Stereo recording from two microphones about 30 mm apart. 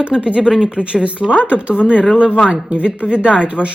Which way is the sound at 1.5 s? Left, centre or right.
Right.